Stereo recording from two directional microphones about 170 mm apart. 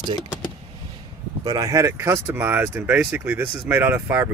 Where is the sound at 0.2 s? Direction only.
25° left (ahead or behind).